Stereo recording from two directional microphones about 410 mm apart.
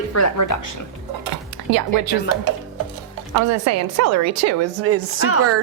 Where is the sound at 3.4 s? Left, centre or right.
Right.